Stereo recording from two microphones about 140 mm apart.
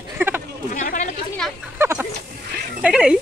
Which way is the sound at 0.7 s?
65° left (ahead or behind).